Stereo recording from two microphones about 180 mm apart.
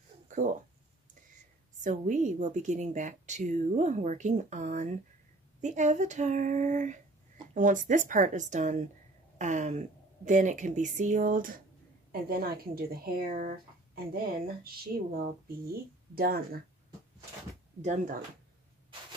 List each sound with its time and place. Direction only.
0.3 s speech: 45° right (ahead or behind)
1.8 s a woman's voice: 45° right (ahead or behind)
17.8 s a woman's voice: 45° right (ahead or behind)